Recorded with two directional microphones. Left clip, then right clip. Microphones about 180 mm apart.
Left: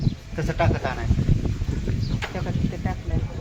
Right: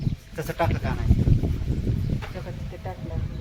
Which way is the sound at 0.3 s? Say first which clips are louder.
Left 2 dB; 60° right (ahead or behind).